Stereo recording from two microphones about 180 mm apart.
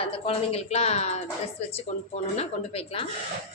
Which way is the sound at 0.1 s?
35° left (ahead or behind).